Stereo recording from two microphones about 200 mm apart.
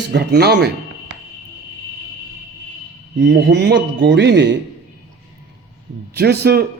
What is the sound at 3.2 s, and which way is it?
Speech, 55° right (ahead or behind).